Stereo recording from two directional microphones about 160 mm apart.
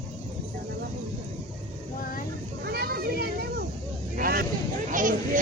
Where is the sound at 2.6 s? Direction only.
75° right (ahead or behind).